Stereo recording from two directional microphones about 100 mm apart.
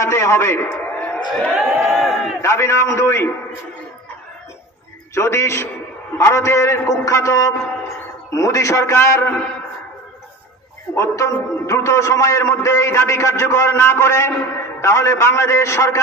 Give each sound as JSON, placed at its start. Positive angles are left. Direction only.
{"t": 0.0, "sound": "a sound", "side_deg": 25}
{"t": 1.5, "sound": "speech", "side_deg": 0}
{"t": 2.4, "sound": "a man's voice", "side_deg": 25}
{"t": 5.1, "sound": "a man's voice", "side_deg": 25}
{"t": 11.0, "sound": "a man's voice", "side_deg": 30}